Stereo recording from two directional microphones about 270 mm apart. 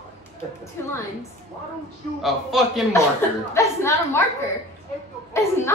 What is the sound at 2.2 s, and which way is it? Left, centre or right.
Speech, centre.